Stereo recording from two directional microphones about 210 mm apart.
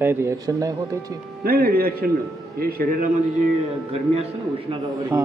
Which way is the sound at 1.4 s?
45° right (ahead or behind).